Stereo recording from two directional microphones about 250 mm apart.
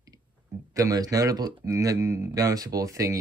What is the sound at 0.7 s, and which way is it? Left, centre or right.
Speech, centre.